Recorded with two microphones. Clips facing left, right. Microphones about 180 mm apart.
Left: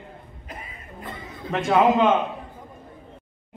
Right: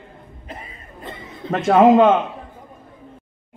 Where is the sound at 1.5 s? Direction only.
45° right (ahead or behind).